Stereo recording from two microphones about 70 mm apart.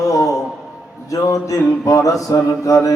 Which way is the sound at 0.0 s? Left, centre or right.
Left.